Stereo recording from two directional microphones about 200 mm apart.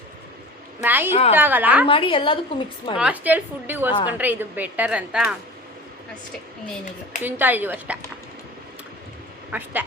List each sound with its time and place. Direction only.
0.8 s a woman's voice: 10° right (ahead or behind)
1.9 s a woman's voice: 25° left (ahead or behind)
3.0 s a woman's voice: 10° right (ahead or behind)
7.2 s a woman's voice: 10° right (ahead or behind)
9.5 s a woman's voice: 10° right (ahead or behind)